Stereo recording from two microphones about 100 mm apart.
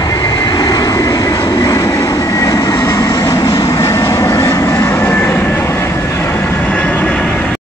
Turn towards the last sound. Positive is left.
turn(degrees=10)  # may be behind; listen again after turning